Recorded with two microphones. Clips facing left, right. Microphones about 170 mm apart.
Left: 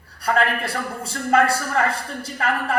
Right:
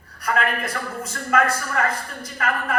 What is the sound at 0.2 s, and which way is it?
A woman's voice, 30° left (ahead or behind).